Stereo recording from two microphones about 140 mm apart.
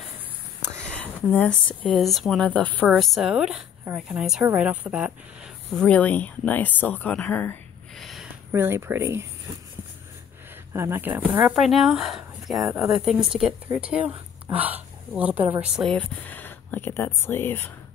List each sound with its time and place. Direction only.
0.7 s speech: 10° left (ahead or behind)
3.0 s speech: centre (ahead or behind)
5.8 s speech: 10° left (ahead or behind)
7.9 s a sound: centre (ahead or behind)
8.5 s speech: 15° right (ahead or behind)
10.7 s a woman's voice: 20° right (ahead or behind)
15.7 s speech: 5° left (ahead or behind)